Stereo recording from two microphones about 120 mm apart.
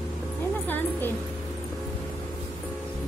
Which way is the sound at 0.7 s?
15° left (ahead or behind).